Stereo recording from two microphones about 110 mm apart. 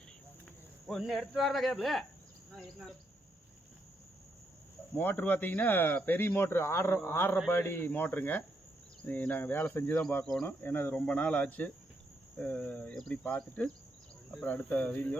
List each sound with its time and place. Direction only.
0.9 s speech: centre (ahead or behind)
4.9 s speech: 15° left (ahead or behind)